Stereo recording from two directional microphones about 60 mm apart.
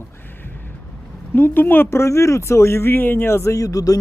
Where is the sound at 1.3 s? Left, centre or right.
Left.